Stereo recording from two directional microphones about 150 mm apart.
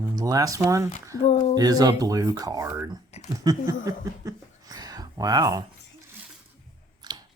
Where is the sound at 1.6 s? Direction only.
25° right (ahead or behind).